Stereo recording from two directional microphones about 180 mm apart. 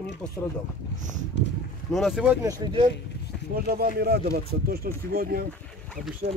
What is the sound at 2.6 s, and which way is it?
Speech, 25° right (ahead or behind).